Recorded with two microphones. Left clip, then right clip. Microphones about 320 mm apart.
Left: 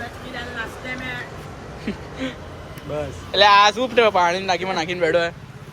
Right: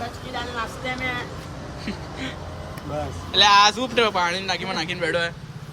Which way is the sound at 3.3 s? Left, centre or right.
Centre.